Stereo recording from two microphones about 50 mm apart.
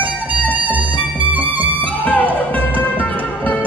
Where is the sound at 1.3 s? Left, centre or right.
Right.